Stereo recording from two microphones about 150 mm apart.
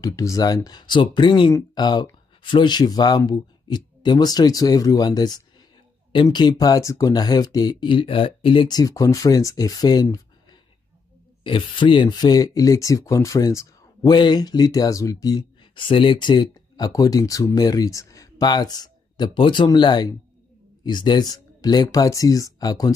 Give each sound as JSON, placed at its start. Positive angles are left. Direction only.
{"t": 0.0, "sound": "speech", "side_deg": 20}
{"t": 11.4, "sound": "speech", "side_deg": 35}